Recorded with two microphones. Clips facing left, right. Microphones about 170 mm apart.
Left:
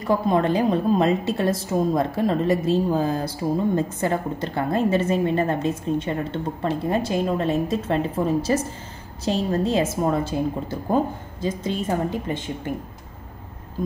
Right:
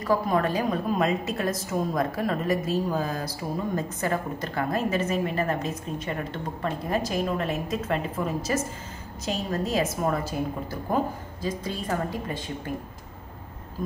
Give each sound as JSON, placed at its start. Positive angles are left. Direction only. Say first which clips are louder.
{"t": 0.0, "sound": "a woman's voice", "louder": "left 3 dB", "side_deg": 25}